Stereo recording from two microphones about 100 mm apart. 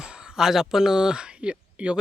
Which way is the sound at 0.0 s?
5° right (ahead or behind).